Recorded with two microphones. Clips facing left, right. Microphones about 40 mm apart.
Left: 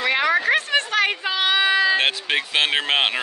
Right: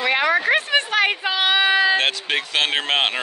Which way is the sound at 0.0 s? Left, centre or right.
Centre.